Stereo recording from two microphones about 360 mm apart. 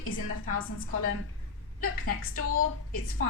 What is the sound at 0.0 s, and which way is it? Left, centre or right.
Speech, left.